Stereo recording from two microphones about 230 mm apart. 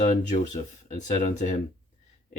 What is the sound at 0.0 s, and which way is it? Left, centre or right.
Speech, left.